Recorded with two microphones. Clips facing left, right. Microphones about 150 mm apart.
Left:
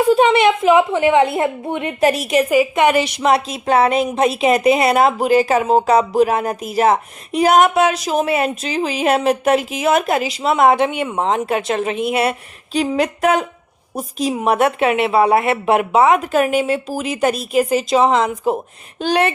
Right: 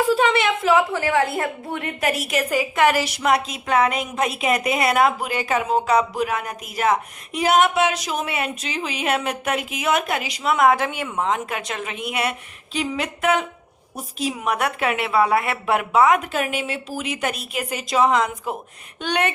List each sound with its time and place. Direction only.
0.0 s a woman's voice: 20° left (ahead or behind)
16.3 s speech: 45° left (ahead or behind)